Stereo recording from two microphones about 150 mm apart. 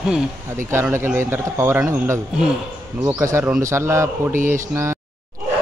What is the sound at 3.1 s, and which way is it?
Speech, 20° right (ahead or behind).